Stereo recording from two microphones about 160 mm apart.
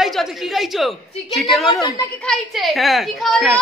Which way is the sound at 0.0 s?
Centre (ahead or behind).